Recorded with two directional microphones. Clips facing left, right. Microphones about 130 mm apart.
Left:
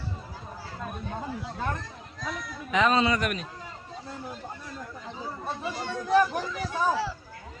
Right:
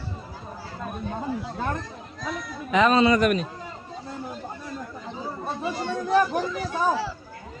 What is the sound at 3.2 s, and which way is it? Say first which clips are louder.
Speech: right 9 dB; 35° right (ahead or behind).